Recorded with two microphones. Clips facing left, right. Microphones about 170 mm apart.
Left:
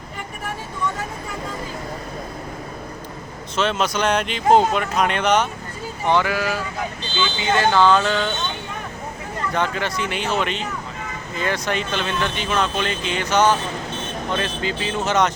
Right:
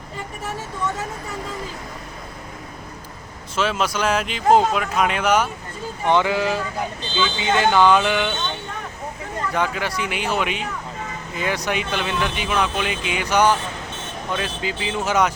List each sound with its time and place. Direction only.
3.5 s speech: 5° right (ahead or behind)
6.1 s speech: 20° right (ahead or behind)
9.6 s speech: 10° right (ahead or behind)